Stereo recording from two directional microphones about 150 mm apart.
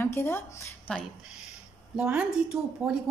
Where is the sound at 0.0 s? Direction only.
15° left (ahead or behind).